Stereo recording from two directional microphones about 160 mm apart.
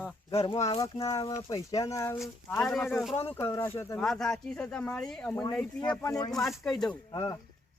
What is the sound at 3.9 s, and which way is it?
Speech, 5° left (ahead or behind).